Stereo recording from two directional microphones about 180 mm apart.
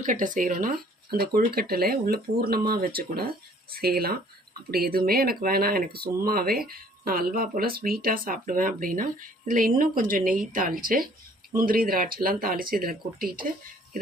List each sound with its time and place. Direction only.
0.0 s speech: 45° right (ahead or behind)